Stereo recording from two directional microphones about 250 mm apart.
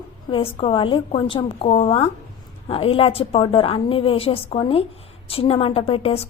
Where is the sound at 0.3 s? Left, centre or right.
Left.